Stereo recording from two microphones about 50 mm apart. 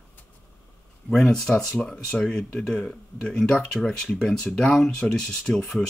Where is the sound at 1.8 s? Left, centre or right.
Centre.